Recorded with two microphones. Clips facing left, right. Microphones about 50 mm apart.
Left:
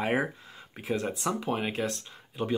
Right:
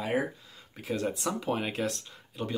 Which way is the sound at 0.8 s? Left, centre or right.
Centre.